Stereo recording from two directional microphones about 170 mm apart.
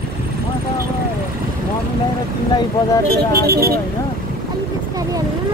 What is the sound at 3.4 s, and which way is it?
Speech, 65° right (ahead or behind).